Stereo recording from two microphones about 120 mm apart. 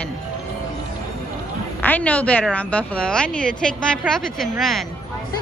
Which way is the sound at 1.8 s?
15° left (ahead or behind).